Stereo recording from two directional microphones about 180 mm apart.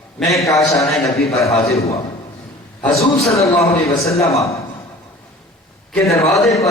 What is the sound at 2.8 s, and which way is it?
A man's voice, 15° left (ahead or behind).